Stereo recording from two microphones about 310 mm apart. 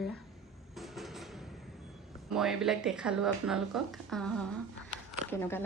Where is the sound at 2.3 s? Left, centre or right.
Centre.